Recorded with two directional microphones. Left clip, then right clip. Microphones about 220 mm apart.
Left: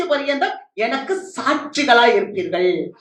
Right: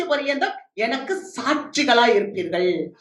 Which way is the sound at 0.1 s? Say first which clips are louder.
Left 2 dB; 30° right (ahead or behind).